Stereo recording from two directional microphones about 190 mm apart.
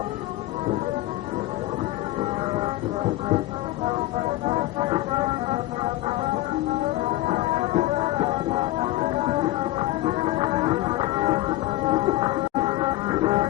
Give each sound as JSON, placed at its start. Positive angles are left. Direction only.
{"t": 4.4, "sound": "music", "side_deg": -30}
{"t": 7.3, "sound": "music", "side_deg": -35}
{"t": 9.7, "sound": "music", "side_deg": -35}